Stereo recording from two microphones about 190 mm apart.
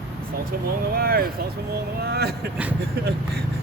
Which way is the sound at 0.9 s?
50° right (ahead or behind).